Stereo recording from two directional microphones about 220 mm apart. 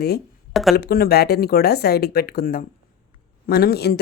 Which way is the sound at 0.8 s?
45° left (ahead or behind).